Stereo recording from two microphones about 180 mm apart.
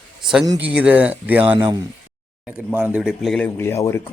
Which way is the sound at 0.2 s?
Centre (ahead or behind).